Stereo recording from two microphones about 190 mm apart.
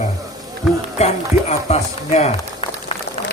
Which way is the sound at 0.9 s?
35° left (ahead or behind).